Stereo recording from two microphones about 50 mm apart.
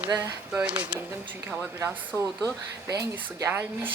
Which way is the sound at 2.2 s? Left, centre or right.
Right.